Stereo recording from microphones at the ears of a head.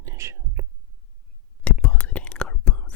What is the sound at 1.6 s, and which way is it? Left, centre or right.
Whispering, left.